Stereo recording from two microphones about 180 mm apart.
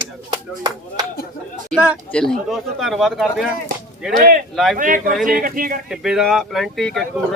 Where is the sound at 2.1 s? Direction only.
Centre (ahead or behind).